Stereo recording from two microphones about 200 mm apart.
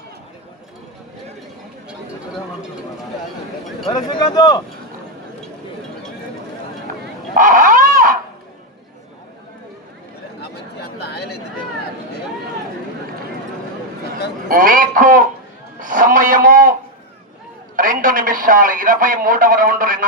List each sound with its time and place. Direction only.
3.8 s speech: 20° left (ahead or behind)
7.3 s a sound: 40° right (ahead or behind)
10.8 s chatter: 55° left (ahead or behind)
14.4 s a man's voice: 45° right (ahead or behind)
17.7 s a man's voice: 45° right (ahead or behind)